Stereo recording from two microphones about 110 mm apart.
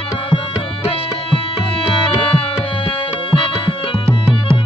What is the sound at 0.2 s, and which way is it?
Tabla, 50° left (ahead or behind).